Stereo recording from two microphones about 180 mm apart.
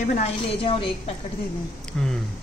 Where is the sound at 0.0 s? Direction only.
45° left (ahead or behind).